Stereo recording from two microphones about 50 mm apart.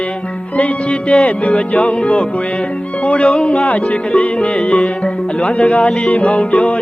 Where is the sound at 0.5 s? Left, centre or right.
Left.